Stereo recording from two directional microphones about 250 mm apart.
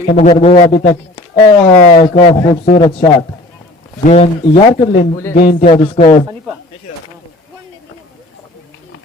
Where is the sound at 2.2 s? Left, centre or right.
Left.